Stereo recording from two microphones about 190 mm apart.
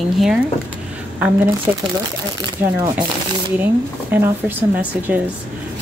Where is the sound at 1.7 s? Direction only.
10° right (ahead or behind).